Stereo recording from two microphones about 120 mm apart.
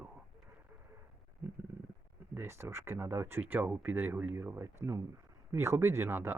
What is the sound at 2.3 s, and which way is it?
Speech, 20° right (ahead or behind).